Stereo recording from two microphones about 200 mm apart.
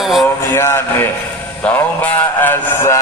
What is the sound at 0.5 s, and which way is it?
Speech, 10° left (ahead or behind).